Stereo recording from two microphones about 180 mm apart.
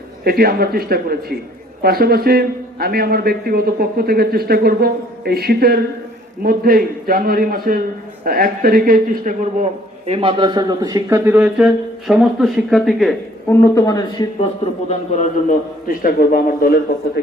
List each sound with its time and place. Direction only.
0.3 s a man's voice: 55° right (ahead or behind)
10.1 s a man's voice: 30° right (ahead or behind); by 13.1 s centre (ahead or behind)
13.5 s speech: 15° left (ahead or behind)
14.8 s a man's voice: 40° left (ahead or behind)